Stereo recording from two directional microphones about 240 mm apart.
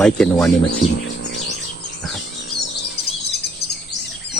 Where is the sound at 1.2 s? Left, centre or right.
Left.